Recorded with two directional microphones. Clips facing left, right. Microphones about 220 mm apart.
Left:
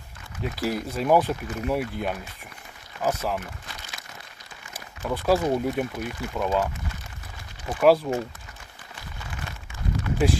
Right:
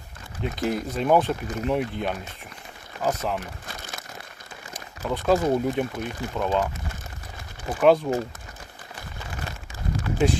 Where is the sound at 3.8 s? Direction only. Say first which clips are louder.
Right 5 dB; 50° right (ahead or behind).